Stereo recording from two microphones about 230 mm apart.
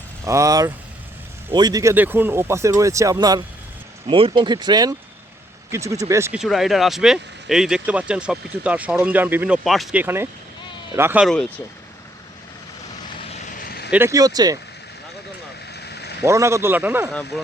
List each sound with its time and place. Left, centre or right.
0.3 s speech: centre
13.4 s vehicle: left
13.9 s speech: centre
15.7 s a sound: left
16.2 s speech: centre